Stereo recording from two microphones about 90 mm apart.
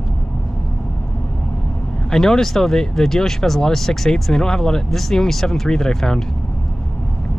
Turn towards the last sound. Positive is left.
turn(degrees=5)  # may be behind; listen again after turning